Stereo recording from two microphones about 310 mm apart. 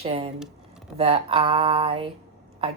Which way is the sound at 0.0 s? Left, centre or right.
Centre.